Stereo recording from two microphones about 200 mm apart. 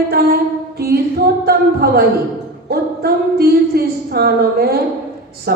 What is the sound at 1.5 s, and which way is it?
A woman's voice, 50° right (ahead or behind).